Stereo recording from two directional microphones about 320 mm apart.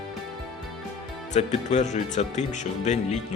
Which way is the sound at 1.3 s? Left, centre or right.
Left.